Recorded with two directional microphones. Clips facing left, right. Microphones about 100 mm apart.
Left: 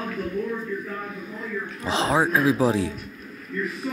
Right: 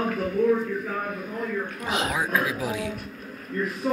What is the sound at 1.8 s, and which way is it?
A man's voice, 30° left (ahead or behind).